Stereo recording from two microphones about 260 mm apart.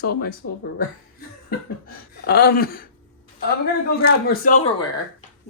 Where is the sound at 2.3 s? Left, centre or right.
Left.